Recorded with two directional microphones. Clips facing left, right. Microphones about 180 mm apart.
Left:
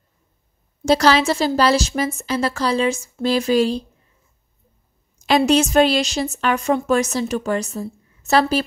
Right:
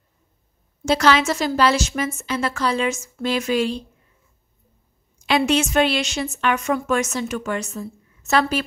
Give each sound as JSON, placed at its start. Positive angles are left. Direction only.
{"t": 0.8, "sound": "a woman's voice", "side_deg": 35}
{"t": 5.2, "sound": "a woman's voice", "side_deg": 40}